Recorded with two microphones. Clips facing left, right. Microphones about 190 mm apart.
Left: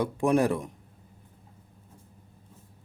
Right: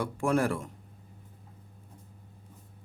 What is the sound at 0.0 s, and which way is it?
Speech, 20° left (ahead or behind).